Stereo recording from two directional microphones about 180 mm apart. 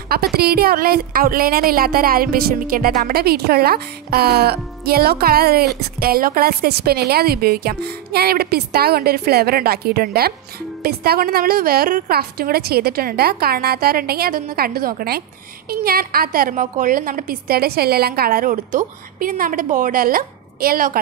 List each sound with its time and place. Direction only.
0.1 s a woman's voice: 60° right (ahead or behind)